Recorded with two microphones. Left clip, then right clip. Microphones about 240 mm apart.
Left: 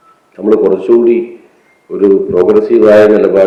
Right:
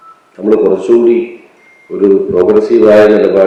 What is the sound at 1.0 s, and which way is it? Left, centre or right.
Speech, centre.